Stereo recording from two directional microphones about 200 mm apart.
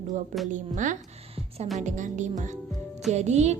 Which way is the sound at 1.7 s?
40° right (ahead or behind).